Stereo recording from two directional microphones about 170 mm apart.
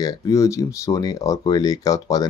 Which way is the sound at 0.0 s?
20° left (ahead or behind).